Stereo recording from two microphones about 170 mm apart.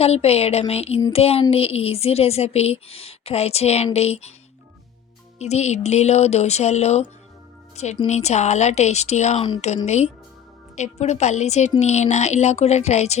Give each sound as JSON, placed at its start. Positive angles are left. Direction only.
{"t": 0.0, "sound": "speech", "side_deg": 35}
{"t": 5.4, "sound": "speech", "side_deg": 40}
{"t": 8.0, "sound": "speech", "side_deg": 40}